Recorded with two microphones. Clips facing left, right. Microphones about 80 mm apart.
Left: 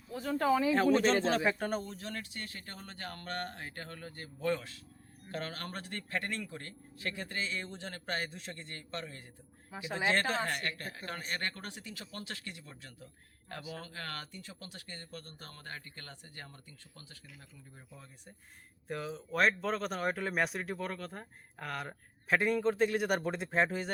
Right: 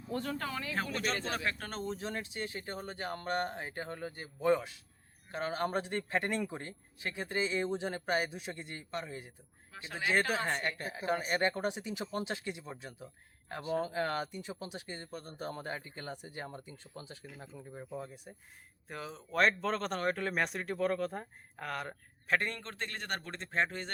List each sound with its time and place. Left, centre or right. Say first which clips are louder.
0.1 s speech: left 7 dB; centre
1.8 s speech: right 4 dB; right
9.7 s speech: left 5 dB; centre
10.1 s speech: right 1 dB; centre
13.7 s speech: right 14 dB; centre
17.2 s speech: right 8 dB; right
18.0 s speech: right 9 dB; centre
18.9 s speech: left 4 dB; centre